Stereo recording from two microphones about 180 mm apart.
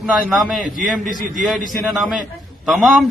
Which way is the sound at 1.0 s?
45° right (ahead or behind).